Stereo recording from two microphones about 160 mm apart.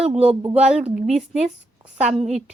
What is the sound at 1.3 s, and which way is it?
A woman's voice, 45° right (ahead or behind).